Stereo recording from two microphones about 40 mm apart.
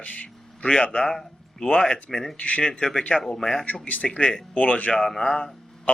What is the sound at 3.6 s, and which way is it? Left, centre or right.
Speech, left.